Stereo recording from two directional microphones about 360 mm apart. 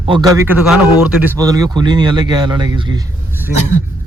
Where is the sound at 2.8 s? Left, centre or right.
Centre.